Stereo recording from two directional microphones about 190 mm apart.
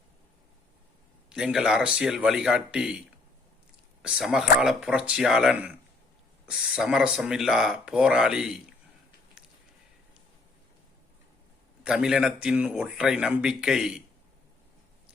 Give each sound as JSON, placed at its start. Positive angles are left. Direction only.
{"t": 1.3, "sound": "speech", "side_deg": -5}
{"t": 4.0, "sound": "speech", "side_deg": -5}
{"t": 11.8, "sound": "speech", "side_deg": -5}